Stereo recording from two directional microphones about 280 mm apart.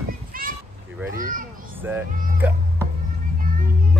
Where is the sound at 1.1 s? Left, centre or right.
Right.